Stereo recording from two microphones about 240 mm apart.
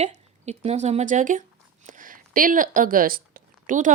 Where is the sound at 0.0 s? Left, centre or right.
Right.